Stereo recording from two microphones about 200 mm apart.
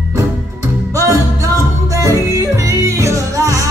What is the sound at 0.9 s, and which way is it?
Music, 15° right (ahead or behind).